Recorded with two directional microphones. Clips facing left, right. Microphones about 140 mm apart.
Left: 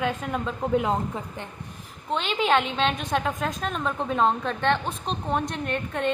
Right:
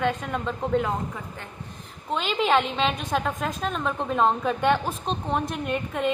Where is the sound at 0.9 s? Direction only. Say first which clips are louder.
Left 3 dB; 25° left (ahead or behind).